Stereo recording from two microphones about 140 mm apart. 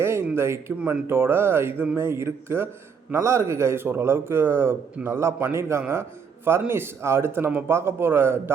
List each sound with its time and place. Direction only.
0.0 s a sound: 20° right (ahead or behind)
0.3 s speech: 20° right (ahead or behind)
0.8 s a man's voice: 5° right (ahead or behind)